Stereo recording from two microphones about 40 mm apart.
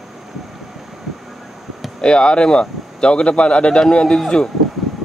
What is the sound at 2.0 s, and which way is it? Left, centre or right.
Speech, left.